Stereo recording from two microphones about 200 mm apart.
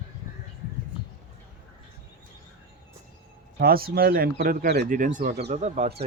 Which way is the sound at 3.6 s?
50° right (ahead or behind).